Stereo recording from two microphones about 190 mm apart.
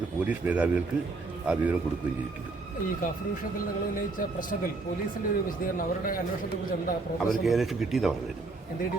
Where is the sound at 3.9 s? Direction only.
45° left (ahead or behind).